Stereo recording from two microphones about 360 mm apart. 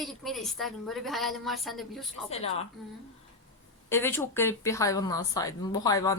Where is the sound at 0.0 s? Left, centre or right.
Centre.